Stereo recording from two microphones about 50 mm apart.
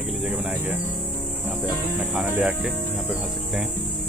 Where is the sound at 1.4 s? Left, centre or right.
Centre.